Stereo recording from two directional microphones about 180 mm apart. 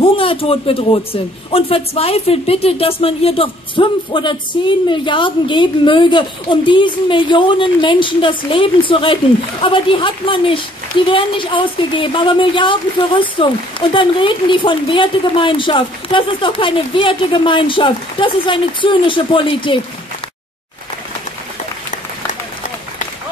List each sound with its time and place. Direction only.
0.0 s a man's voice: 30° left (ahead or behind)